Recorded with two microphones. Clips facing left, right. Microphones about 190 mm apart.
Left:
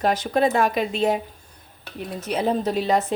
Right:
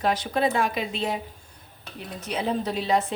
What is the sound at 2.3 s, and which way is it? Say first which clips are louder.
Speech: left 4 dB; 45° left (ahead or behind).